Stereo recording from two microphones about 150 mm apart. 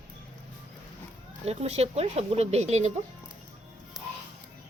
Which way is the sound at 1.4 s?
45° right (ahead or behind).